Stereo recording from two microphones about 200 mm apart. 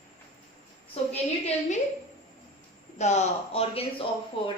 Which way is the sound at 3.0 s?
35° left (ahead or behind).